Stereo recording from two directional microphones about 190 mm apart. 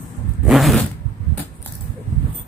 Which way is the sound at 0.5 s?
Centre (ahead or behind).